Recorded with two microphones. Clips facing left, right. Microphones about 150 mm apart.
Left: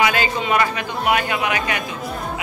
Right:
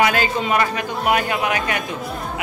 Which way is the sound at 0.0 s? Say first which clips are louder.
Right 1 dB; 45° right (ahead or behind).